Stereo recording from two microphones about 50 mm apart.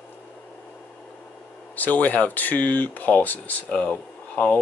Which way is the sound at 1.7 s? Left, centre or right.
Left.